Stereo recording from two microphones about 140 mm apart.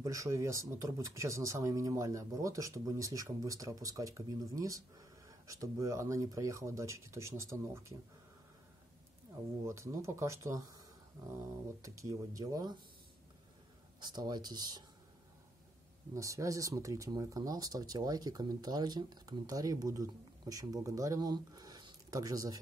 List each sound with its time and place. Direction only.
0.0 s speech: 20° right (ahead or behind)
9.7 s speech: 20° right (ahead or behind)
13.9 s speech: 30° right (ahead or behind)
16.2 s speech: 20° right (ahead or behind)